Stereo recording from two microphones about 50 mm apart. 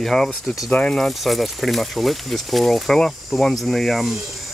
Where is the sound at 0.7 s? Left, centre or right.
Left.